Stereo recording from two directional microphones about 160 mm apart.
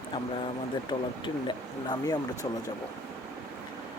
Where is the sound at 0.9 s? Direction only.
30° left (ahead or behind).